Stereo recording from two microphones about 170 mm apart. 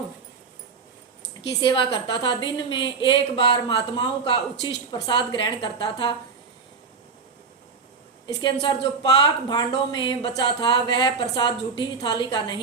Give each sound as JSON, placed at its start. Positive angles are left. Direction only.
{"t": 1.6, "sound": "speech", "side_deg": 30}
{"t": 8.3, "sound": "speech", "side_deg": 25}